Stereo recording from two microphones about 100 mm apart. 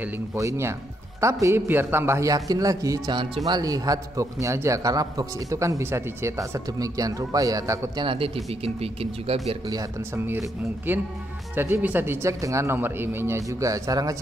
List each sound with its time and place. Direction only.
0.4 s a man's voice: 30° right (ahead or behind)
8.0 s a man's voice: 60° right (ahead or behind)
8.5 s speech: 80° right
9.7 s a man's voice: 35° right (ahead or behind)
10.2 s speech: 25° right (ahead or behind)